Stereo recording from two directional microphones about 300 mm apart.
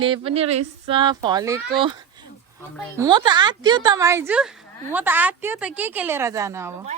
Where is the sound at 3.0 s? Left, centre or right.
Centre.